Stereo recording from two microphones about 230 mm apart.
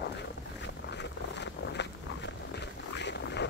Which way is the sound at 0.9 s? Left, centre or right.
Left.